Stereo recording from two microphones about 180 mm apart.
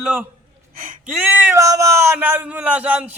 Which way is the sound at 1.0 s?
10° right (ahead or behind).